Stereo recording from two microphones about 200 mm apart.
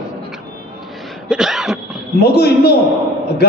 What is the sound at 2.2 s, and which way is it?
Speech, 55° left (ahead or behind).